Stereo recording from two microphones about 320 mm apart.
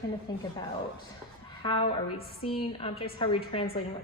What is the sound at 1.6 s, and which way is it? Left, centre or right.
A woman's voice, centre.